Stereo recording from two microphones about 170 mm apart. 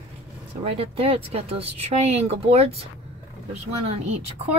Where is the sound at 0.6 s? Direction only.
35° right (ahead or behind).